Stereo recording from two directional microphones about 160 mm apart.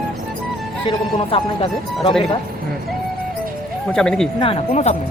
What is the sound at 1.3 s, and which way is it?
Speech, 35° left (ahead or behind).